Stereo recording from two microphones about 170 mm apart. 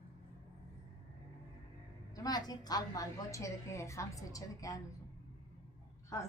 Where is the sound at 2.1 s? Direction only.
20° left (ahead or behind).